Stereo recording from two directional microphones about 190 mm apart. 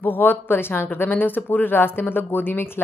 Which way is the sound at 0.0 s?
10° left (ahead or behind).